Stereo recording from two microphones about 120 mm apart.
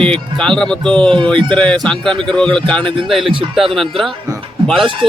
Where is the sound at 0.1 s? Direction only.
5° left (ahead or behind).